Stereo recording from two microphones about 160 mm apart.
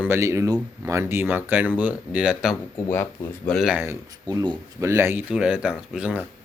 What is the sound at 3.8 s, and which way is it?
Speech, 20° right (ahead or behind).